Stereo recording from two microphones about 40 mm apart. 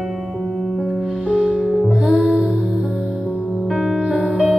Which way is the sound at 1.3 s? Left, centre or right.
Right.